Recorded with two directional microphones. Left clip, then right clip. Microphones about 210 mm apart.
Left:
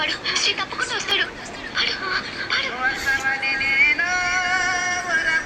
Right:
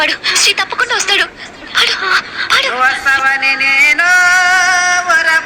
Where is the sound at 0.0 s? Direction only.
45° right (ahead or behind).